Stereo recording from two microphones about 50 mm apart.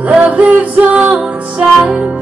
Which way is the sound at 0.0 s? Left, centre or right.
Right.